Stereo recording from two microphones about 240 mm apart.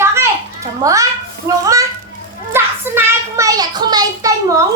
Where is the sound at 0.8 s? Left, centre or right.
Centre.